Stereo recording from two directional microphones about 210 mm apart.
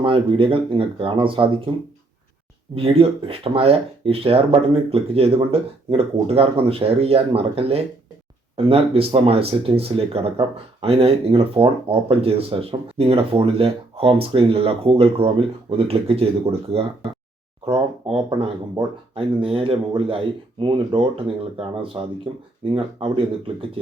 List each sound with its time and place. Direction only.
0.0 s speech: 25° right (ahead or behind)
2.7 s speech: 25° right (ahead or behind)